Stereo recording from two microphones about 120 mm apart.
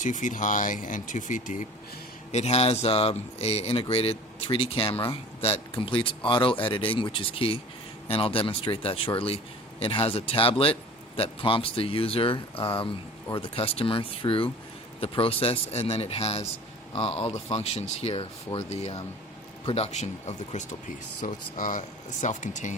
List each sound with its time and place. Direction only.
0.0 s speech: 90° left
2.3 s a man's voice: 60° left (ahead or behind); by 22.7 s 90° left